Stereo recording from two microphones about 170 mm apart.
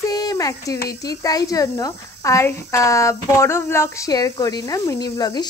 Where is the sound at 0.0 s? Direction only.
20° left (ahead or behind).